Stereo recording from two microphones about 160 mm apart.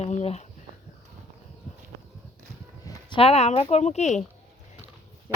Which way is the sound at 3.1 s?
40° left (ahead or behind).